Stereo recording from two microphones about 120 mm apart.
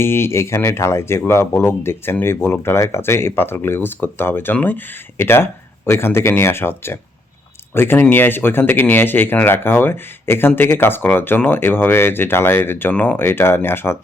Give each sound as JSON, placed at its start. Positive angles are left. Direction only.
{"t": 0.0, "sound": "speech", "side_deg": 20}